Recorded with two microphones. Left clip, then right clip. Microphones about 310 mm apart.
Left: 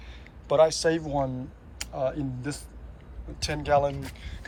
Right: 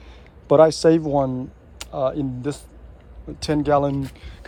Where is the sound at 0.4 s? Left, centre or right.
Right.